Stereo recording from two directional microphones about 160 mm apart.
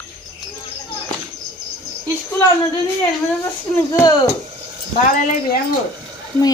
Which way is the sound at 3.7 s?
20° left (ahead or behind).